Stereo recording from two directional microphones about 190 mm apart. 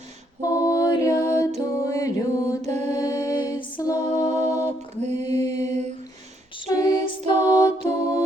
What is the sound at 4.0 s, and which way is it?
Mantra, 35° right (ahead or behind).